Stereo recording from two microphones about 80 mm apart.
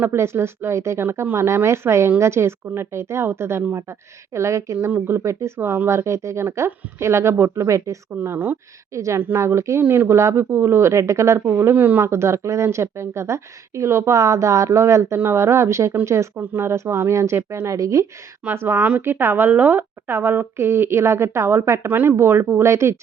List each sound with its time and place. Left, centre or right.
0.0 s speech: right
8.1 s a woman's voice: right
8.9 s speech: right
16.4 s speech: right
18.4 s a woman's voice: right
21.8 s a woman's voice: right